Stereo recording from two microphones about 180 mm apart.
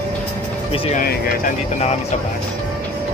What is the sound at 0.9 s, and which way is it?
Vehicle, 50° left (ahead or behind).